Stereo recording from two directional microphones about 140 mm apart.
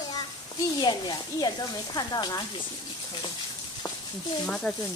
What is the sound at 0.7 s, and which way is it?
Speech, 30° left (ahead or behind).